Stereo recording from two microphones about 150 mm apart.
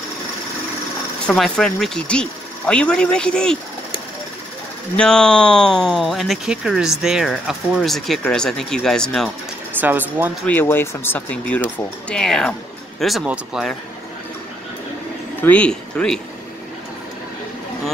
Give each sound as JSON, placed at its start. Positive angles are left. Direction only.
{"t": 1.2, "sound": "speech", "side_deg": 5}
{"t": 4.9, "sound": "speech", "side_deg": 5}
{"t": 9.8, "sound": "speech", "side_deg": -10}
{"t": 10.4, "sound": "speech", "side_deg": 15}
{"t": 15.4, "sound": "speech", "side_deg": 10}